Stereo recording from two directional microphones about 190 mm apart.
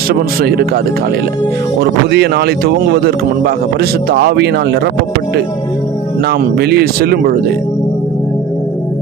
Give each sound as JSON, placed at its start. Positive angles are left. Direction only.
{"t": 0.1, "sound": "speech", "side_deg": -55}
{"t": 1.8, "sound": "a man's voice", "side_deg": -60}
{"t": 6.2, "sound": "a man's voice", "side_deg": -60}